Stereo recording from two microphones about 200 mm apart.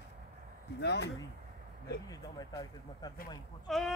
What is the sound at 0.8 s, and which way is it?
Speech, 55° left (ahead or behind).